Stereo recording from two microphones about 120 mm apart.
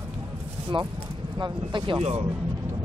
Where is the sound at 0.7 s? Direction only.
45° right (ahead or behind).